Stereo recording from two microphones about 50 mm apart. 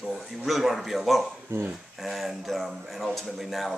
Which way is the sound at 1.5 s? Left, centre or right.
Right.